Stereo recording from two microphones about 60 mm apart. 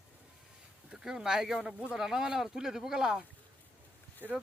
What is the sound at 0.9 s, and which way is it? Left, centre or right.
Speech, centre.